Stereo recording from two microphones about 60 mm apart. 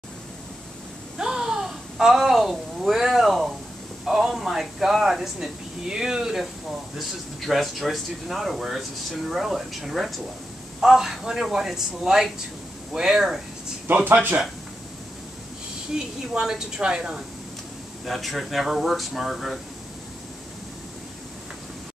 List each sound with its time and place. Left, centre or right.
1.1 s a sound: centre
4.0 s speech: centre
13.8 s speech: right
15.9 s speech: centre
18.0 s speech: centre